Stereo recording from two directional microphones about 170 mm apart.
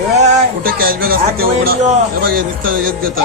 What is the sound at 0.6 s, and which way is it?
Speech, 60° right (ahead or behind).